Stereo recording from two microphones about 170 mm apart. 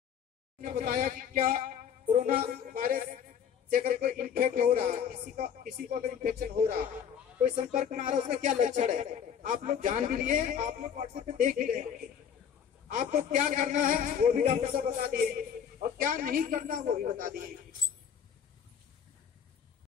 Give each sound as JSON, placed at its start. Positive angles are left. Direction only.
{"t": 0.6, "sound": "speech", "side_deg": -55}
{"t": 12.8, "sound": "speech", "side_deg": -50}